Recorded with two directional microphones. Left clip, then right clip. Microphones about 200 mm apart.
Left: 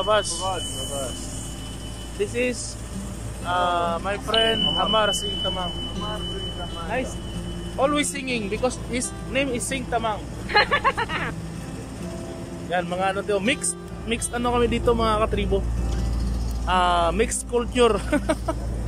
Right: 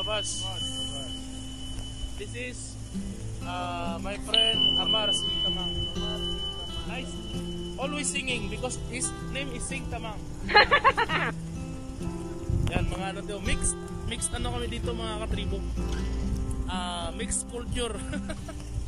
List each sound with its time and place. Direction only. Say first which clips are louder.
0.0 s speech: left 9 dB; 5° right (ahead or behind)
2.1 s speech: left 14 dB; centre (ahead or behind)
3.4 s speech: left 11 dB; 10° right (ahead or behind)
5.3 s speech: left 2 dB; centre (ahead or behind)
7.8 s speech: left 9 dB; 5° right (ahead or behind)
9.3 s speech: left 13 dB; centre (ahead or behind)
12.7 s speech: left 11 dB; centre (ahead or behind)
16.6 s speech: left 15 dB; centre (ahead or behind)